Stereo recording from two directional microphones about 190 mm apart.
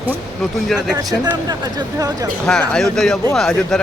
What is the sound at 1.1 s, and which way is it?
Speech, 20° right (ahead or behind).